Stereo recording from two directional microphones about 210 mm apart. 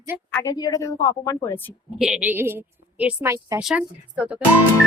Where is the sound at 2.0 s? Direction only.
5° right (ahead or behind).